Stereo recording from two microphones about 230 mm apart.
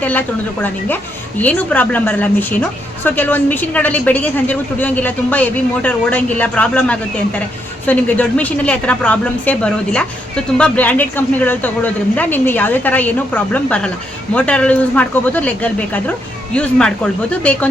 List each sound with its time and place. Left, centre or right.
0.0 s a woman's voice: centre